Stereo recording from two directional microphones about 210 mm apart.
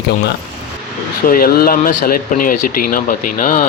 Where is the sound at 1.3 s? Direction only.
45° left (ahead or behind).